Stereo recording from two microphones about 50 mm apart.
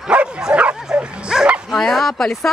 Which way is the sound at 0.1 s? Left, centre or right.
Right.